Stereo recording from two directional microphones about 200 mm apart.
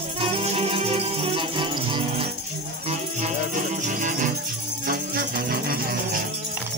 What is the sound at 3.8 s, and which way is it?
Music, 40° right (ahead or behind).